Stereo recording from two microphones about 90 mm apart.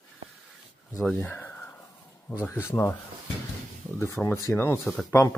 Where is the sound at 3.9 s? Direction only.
30° left (ahead or behind).